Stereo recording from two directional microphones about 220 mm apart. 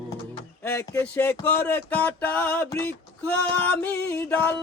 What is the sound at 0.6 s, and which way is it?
Music, 10° left (ahead or behind).